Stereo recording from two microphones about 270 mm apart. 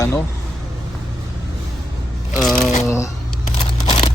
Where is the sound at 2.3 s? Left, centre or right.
Centre.